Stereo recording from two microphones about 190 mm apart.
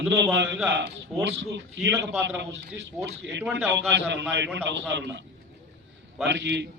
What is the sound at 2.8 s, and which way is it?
Speech, 65° right (ahead or behind).